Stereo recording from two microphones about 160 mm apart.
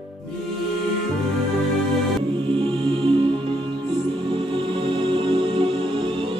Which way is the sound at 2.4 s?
35° right (ahead or behind).